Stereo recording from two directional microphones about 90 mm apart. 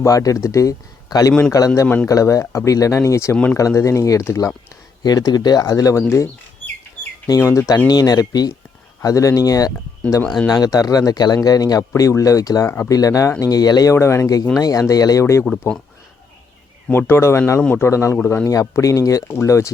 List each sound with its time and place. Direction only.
0.0 s speech: 40° left (ahead or behind)
5.0 s speech: 50° left (ahead or behind)
7.3 s speech: 35° left (ahead or behind)
13.9 s speech: 30° left (ahead or behind)
16.9 s speech: 25° left (ahead or behind)